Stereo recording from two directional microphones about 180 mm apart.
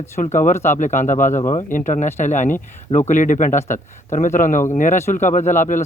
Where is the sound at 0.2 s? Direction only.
45° left (ahead or behind).